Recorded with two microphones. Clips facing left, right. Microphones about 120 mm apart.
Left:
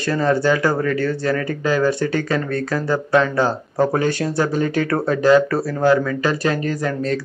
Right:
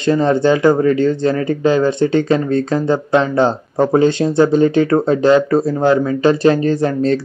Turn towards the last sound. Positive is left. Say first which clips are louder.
# right 7 dB
turn(degrees=-30)  # may be behind; listen again after turning